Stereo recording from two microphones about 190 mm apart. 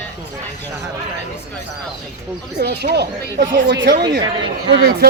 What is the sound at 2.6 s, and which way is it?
A man's voice, 60° right (ahead or behind).